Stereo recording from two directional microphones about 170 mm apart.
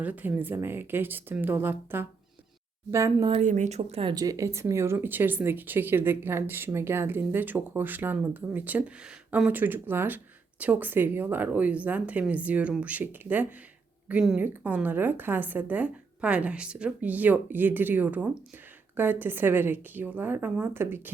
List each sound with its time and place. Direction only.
0.0 s speech: 10° right (ahead or behind)
3.4 s speech: 45° right (ahead or behind)
4.1 s speech: 20° right (ahead or behind)